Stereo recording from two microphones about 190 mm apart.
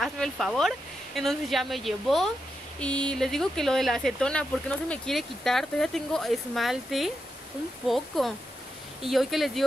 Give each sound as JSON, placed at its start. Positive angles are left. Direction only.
{"t": 0.0, "sound": "speech", "side_deg": 0}
{"t": 8.1, "sound": "speech", "side_deg": 0}